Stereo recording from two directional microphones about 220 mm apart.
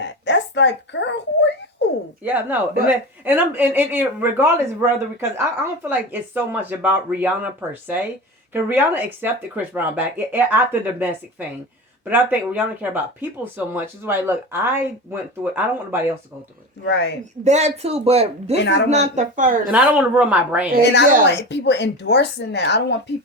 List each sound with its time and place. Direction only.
0.0 s a sound: 50° left (ahead or behind)
2.2 s a woman's voice: 10° right (ahead or behind)
16.8 s speech: 50° left (ahead or behind)
17.4 s speech: 30° right (ahead or behind)
18.5 s speech: 55° left (ahead or behind)
18.9 s speech: 30° right (ahead or behind)
19.7 s a woman's voice: 5° right (ahead or behind)
21.2 s speech: 50° left (ahead or behind)